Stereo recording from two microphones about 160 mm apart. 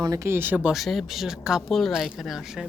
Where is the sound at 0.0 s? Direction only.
20° right (ahead or behind).